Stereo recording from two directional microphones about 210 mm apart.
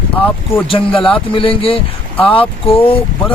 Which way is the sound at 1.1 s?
25° left (ahead or behind).